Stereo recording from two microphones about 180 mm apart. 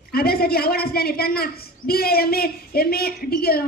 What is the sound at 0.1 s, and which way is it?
A woman's voice, 60° left (ahead or behind).